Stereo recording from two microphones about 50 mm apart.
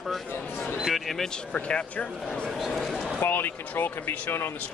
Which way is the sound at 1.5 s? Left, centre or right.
Left.